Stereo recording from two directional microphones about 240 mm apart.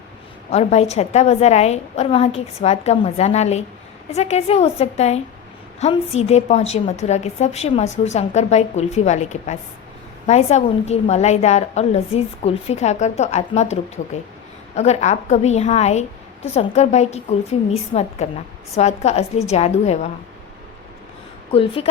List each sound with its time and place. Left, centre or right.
0.5 s a woman's voice: left
21.5 s a woman's voice: left